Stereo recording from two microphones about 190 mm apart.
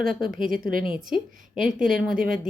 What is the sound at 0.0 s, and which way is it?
Speech, 50° right (ahead or behind).